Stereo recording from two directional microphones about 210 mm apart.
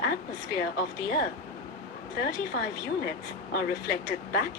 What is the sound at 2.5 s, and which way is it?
Speech, 50° left (ahead or behind).